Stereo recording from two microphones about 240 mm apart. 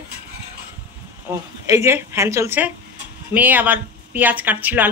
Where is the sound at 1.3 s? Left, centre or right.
Centre.